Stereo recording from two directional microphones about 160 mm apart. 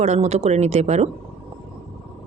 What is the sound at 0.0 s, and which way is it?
Speech, 40° right (ahead or behind).